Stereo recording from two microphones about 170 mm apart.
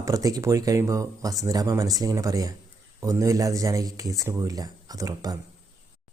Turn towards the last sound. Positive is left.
turn(degrees=-20)  # may be behind; listen again after turning